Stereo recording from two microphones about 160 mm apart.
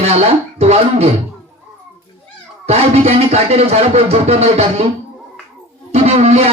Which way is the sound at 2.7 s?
40° right (ahead or behind).